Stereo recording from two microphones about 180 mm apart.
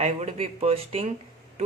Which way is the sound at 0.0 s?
35° right (ahead or behind).